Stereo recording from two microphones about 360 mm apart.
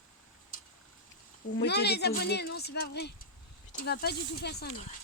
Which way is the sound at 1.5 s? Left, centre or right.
Left.